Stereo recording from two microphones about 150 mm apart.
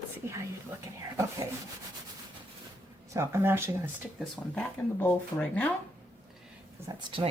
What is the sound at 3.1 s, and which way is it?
Speech, 15° right (ahead or behind).